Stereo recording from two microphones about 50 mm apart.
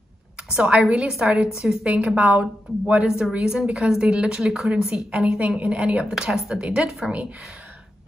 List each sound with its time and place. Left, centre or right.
0.5 s a woman's voice: right
1.1 s a woman's voice: centre
1.9 s a woman's voice: right
3.1 s a woman's voice: centre